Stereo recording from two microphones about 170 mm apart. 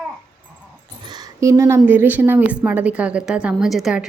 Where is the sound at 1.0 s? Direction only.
25° right (ahead or behind).